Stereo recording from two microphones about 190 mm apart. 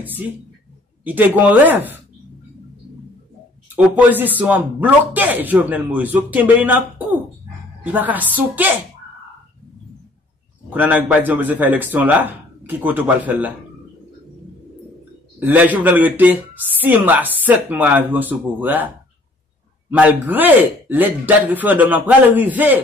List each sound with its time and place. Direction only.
1.0 s a woman's voice: 10° right (ahead or behind)
3.7 s a woman's voice: 10° right (ahead or behind)
10.7 s a woman's voice: 10° right (ahead or behind)
15.3 s a woman's voice: 10° right (ahead or behind)
19.9 s a woman's voice: 10° right (ahead or behind)